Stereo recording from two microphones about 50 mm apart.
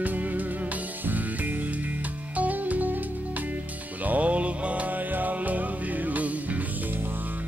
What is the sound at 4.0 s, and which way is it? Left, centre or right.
Music, right.